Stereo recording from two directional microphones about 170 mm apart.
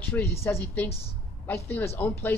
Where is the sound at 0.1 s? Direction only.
15° left (ahead or behind).